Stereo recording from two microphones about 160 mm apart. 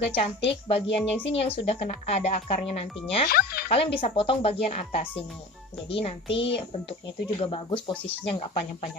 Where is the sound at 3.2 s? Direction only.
70° left (ahead or behind).